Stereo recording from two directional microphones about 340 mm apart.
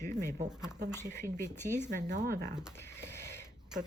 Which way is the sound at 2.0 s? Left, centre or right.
Right.